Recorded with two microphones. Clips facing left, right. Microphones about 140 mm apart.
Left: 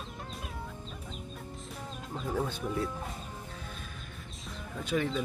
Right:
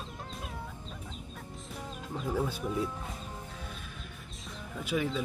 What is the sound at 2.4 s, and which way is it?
Speech, 5° right (ahead or behind).